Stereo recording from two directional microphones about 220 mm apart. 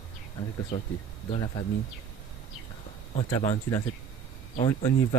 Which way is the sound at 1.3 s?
20° left (ahead or behind).